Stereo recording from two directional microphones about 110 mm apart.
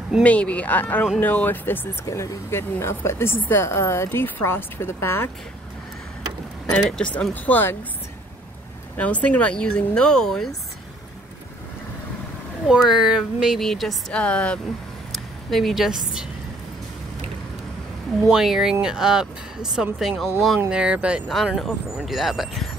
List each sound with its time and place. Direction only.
0.2 s speech: 10° left (ahead or behind)
6.7 s speech: 10° left (ahead or behind)
8.9 s speech: 10° left (ahead or behind)
12.6 s a woman's voice: 5° right (ahead or behind)
18.3 s speech: 5° right (ahead or behind)
21.3 s speech: centre (ahead or behind)